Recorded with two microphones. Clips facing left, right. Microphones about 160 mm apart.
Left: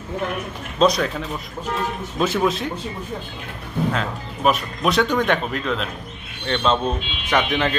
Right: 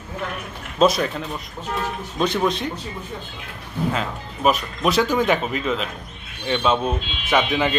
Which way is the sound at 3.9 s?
Centre (ahead or behind).